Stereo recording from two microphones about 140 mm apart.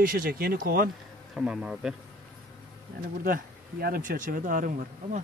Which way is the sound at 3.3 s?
90° right.